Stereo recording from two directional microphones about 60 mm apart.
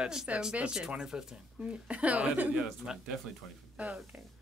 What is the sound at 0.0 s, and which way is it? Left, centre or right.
Speech, centre.